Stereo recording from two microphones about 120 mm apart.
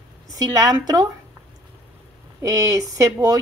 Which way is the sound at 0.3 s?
30° right (ahead or behind).